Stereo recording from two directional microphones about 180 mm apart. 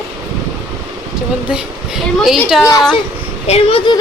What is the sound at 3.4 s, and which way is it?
Speech, 35° left (ahead or behind).